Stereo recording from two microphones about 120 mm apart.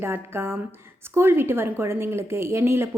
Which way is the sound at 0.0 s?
20° right (ahead or behind).